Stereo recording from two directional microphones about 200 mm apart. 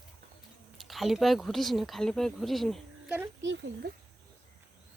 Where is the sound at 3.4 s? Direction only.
65° right (ahead or behind).